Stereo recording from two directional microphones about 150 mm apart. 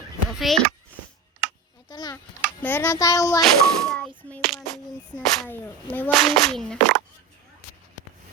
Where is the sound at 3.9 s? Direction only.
5° left (ahead or behind).